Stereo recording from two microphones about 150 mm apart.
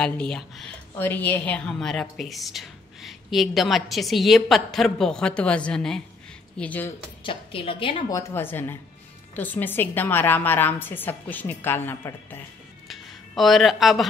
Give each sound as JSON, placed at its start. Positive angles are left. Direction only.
{"t": 0.0, "sound": "a woman's voice", "side_deg": 5}
{"t": 7.2, "sound": "a woman's voice", "side_deg": 35}
{"t": 8.1, "sound": "a woman's voice", "side_deg": 20}
{"t": 13.3, "sound": "a woman's voice", "side_deg": 0}